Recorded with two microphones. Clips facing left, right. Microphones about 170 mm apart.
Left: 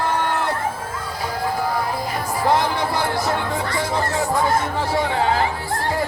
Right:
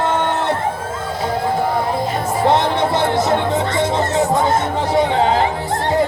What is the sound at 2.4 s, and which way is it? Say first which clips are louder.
Music: right 4 dB; 25° right (ahead or behind).